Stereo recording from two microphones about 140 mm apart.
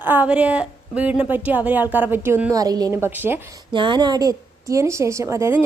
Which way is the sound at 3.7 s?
35° right (ahead or behind).